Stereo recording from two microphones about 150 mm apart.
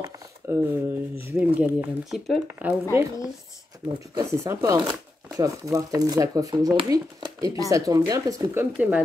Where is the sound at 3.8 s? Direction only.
5° right (ahead or behind).